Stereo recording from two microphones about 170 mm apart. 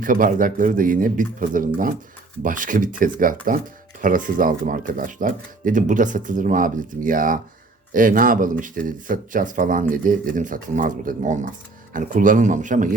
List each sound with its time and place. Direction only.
0.0 s speech: 55° right (ahead or behind)